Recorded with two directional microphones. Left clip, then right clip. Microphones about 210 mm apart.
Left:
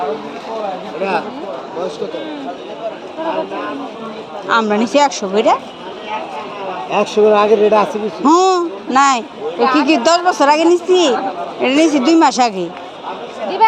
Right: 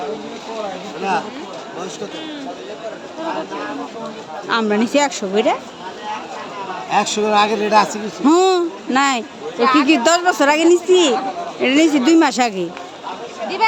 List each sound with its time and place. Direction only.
4.4 s speech: 15° right (ahead or behind)
6.9 s speech: 35° right (ahead or behind)
8.2 s a woman's voice: 20° right (ahead or behind)